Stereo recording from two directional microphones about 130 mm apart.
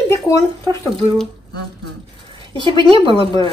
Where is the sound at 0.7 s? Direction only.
40° right (ahead or behind).